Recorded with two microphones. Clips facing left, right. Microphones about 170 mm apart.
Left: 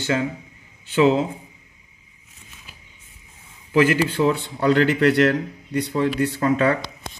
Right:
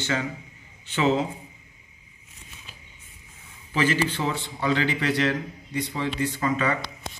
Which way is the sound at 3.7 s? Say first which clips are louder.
Left 6 dB; 60° left (ahead or behind).